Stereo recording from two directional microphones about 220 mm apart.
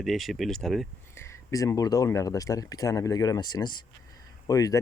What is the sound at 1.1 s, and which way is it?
Speech, 10° left (ahead or behind).